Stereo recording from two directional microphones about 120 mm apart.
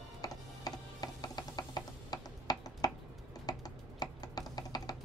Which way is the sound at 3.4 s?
30° left (ahead or behind).